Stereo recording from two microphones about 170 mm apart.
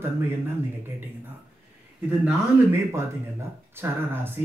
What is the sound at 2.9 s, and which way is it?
Speech, 15° right (ahead or behind).